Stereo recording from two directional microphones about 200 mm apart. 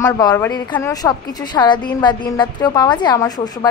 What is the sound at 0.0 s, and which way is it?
A woman's voice, 15° left (ahead or behind).